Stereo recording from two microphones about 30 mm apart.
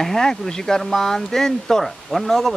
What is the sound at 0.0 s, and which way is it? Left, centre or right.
Speech, centre.